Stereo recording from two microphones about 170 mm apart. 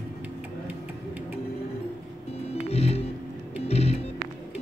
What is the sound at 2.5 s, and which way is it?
Music, 40° left (ahead or behind).